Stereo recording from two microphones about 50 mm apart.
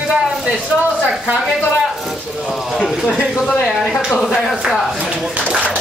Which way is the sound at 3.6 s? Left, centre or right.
Centre.